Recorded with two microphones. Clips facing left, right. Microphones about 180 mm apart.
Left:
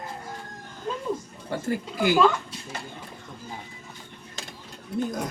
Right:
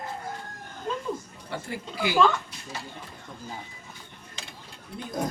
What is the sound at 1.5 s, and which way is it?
Speech, 45° left (ahead or behind).